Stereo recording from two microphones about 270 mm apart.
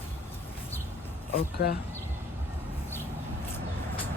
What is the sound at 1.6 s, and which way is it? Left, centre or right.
Speech, left.